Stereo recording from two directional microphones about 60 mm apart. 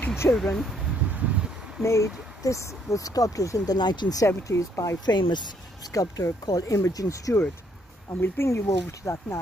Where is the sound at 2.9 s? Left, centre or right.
Left.